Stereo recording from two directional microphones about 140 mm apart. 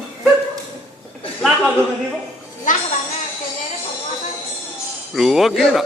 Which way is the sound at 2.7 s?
70° left (ahead or behind).